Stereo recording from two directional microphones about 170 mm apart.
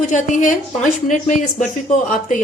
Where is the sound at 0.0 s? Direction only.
45° left (ahead or behind).